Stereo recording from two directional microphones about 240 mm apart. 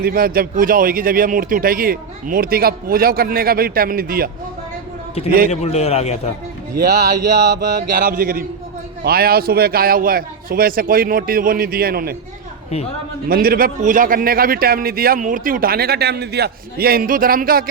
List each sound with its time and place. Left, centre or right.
0.0 s a man's voice: right
5.5 s a man's voice: left
6.7 s a man's voice: right
13.2 s a man's voice: right